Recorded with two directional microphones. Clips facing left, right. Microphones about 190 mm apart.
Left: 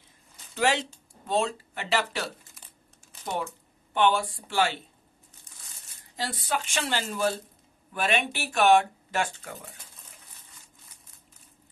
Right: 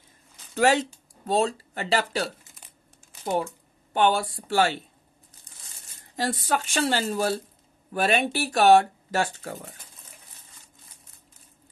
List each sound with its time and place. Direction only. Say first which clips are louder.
0.6 s speech: right 5 dB; 45° right (ahead or behind)
3.9 s speech: right 2 dB; 40° right (ahead or behind)
6.1 s speech: right 5 dB; 45° right (ahead or behind)